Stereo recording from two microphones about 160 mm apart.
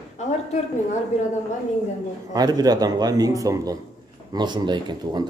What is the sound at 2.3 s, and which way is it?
Speech, 25° right (ahead or behind).